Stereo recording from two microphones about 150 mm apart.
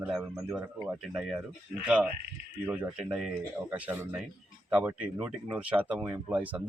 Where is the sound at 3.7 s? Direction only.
10° right (ahead or behind).